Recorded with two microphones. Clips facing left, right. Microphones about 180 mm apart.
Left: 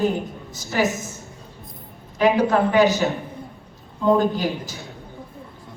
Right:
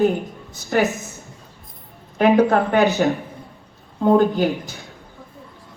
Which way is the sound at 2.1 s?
55° right (ahead or behind).